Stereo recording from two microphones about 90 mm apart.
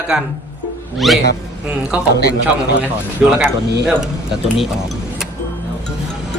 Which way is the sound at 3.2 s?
10° right (ahead or behind).